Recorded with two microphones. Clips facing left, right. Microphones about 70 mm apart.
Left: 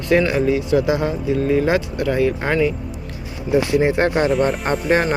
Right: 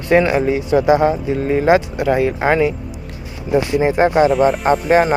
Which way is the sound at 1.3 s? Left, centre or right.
Right.